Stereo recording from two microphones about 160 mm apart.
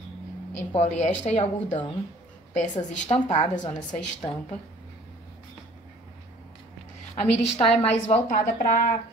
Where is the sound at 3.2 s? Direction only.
45° left (ahead or behind).